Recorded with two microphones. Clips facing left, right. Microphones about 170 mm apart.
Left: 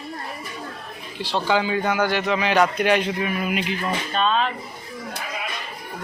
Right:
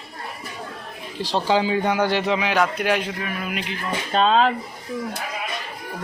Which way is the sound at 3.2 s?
10° left (ahead or behind).